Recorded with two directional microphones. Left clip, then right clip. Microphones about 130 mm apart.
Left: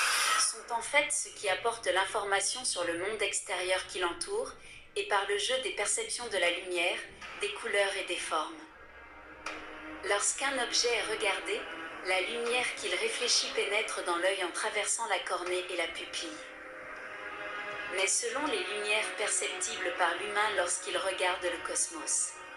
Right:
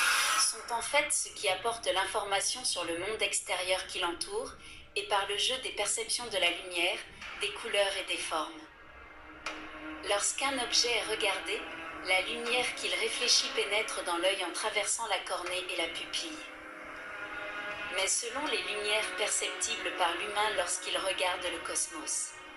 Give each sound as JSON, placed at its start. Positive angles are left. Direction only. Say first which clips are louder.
{"t": 0.2, "sound": "a sound", "louder": "even", "side_deg": 30}
{"t": 1.4, "sound": "a woman's voice", "louder": "even", "side_deg": 30}
{"t": 10.0, "sound": "a woman's voice", "louder": "even", "side_deg": 35}
{"t": 17.7, "sound": "a woman's voice", "louder": "left 1 dB", "side_deg": 30}